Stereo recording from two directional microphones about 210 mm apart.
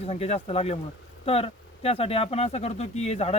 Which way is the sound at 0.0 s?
30° left (ahead or behind).